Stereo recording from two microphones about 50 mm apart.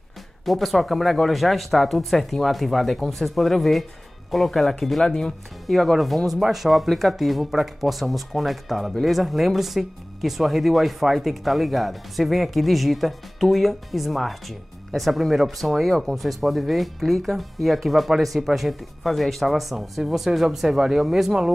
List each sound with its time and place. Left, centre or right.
0.5 s speech: centre
5.0 s speech: centre
5.7 s speech: centre